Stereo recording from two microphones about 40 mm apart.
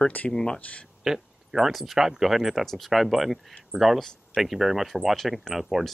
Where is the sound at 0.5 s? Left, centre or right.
Left.